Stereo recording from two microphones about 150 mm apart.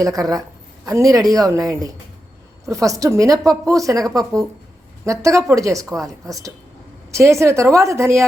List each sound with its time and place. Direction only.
0.0 s a woman's voice: 25° right (ahead or behind)